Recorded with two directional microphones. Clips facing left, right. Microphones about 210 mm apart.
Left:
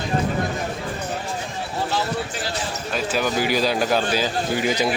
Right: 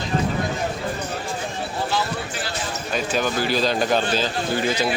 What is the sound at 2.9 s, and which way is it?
A man's voice, 5° left (ahead or behind).